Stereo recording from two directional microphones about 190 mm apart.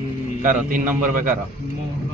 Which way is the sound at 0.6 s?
45° right (ahead or behind).